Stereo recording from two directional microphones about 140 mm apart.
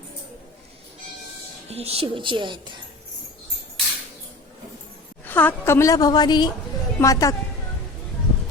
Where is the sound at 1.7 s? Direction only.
45° right (ahead or behind).